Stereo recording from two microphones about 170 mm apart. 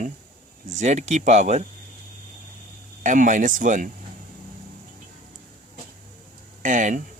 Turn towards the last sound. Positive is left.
turn(degrees=-50)  # may be behind; listen again after turning